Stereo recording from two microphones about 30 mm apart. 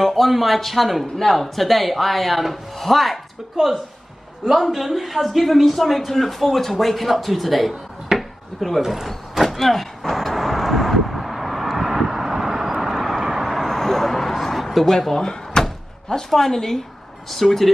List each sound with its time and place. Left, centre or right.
0.0 s a man's voice: centre
4.5 s a man's voice: centre
8.2 s chopping: centre
9.0 s vehicle: centre
11.1 s vehicle: centre
13.2 s vehicle: centre
13.5 s a sound: centre
14.9 s a woman's voice: centre
15.6 s door: left
16.3 s a woman's voice: centre